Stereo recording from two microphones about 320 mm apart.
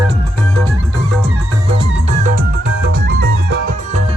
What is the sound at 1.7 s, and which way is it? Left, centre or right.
Music, right.